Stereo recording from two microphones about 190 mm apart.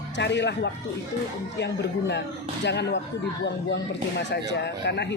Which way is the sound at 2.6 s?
65° left (ahead or behind).